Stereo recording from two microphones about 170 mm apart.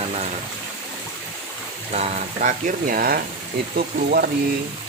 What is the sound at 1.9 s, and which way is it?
Speech, 45° right (ahead or behind).